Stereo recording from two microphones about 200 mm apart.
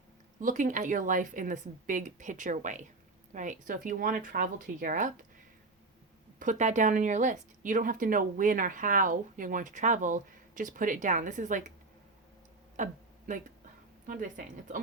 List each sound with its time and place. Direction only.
0.3 s speech: 40° right (ahead or behind)
6.4 s speech: 35° right (ahead or behind)
12.7 s a sound: 40° right (ahead or behind)
14.1 s speech: 40° right (ahead or behind)